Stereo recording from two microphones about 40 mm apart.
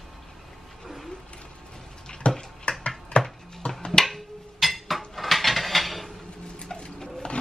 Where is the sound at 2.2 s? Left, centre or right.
Left.